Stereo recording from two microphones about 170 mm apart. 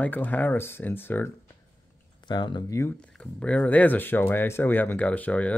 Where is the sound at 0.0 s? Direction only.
10° left (ahead or behind).